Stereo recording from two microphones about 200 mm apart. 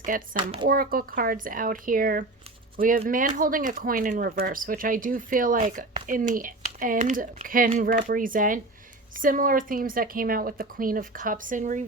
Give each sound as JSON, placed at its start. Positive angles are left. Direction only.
{"t": 0.3, "sound": "speech", "side_deg": -25}
{"t": 0.7, "sound": "speech", "side_deg": -50}